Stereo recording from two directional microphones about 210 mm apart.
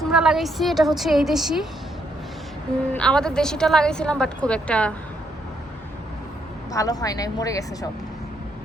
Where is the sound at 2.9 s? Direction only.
5° left (ahead or behind).